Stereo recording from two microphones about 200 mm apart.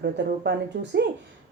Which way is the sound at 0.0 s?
60° right (ahead or behind).